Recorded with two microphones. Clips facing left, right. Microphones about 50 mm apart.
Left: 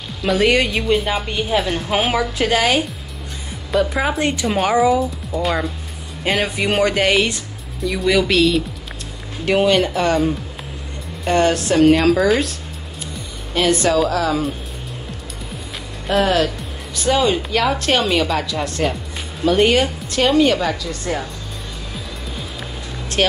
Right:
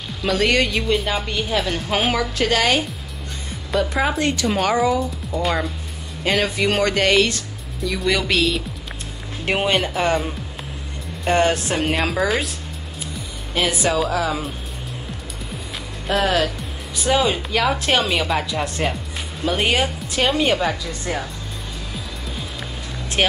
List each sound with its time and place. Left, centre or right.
0.2 s speech: centre
4.2 s speech: centre
6.2 s speech: centre
9.5 s speech: right
11.3 s speech: centre
16.1 s speech: centre
18.5 s speech: centre
19.4 s speech: centre
23.2 s speech: centre